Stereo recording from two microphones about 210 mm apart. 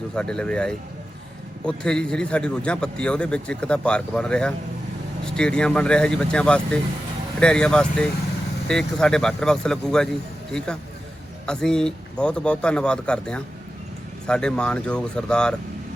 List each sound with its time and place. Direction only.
0.2 s a man's voice: 5° left (ahead or behind)